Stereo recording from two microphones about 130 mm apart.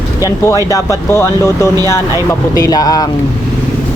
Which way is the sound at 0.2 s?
25° left (ahead or behind).